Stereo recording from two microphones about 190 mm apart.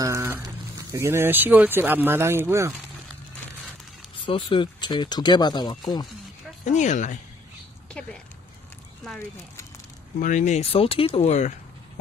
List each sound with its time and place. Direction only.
0.0 s a sound: 15° right (ahead or behind)
0.9 s speech: 15° right (ahead or behind)
4.3 s speech: 25° left (ahead or behind)
6.6 s speech: 40° left (ahead or behind)
10.2 s speech: 40° left (ahead or behind)